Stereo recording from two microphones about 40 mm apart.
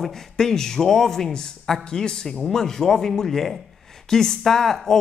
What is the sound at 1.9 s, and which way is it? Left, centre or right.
Speech, centre.